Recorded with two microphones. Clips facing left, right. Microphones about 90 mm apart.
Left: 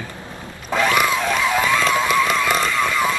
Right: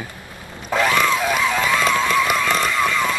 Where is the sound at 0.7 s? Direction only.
Centre (ahead or behind).